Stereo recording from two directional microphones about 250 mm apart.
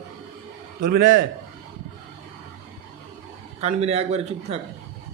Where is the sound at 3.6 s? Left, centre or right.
Right.